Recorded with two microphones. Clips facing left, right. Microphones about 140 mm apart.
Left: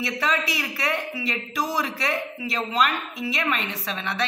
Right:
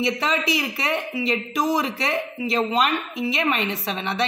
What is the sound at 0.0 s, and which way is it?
A man's voice, 25° right (ahead or behind).